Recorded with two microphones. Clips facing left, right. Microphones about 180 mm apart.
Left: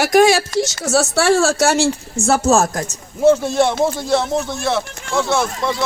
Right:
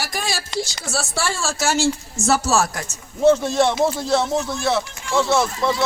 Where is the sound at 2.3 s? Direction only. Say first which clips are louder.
Left 4 dB; 50° left (ahead or behind).